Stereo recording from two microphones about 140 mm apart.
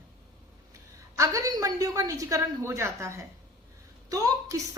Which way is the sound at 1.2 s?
25° right (ahead or behind).